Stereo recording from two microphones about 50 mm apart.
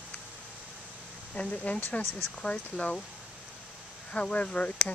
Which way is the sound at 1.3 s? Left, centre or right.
Left.